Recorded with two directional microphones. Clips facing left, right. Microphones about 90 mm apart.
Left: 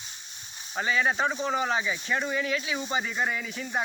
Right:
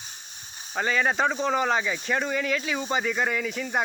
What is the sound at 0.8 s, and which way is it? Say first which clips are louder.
Speech: right 2 dB; 65° right (ahead or behind).